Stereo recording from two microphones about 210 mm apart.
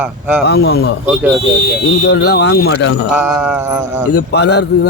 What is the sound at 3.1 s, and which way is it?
Mantra, 5° right (ahead or behind).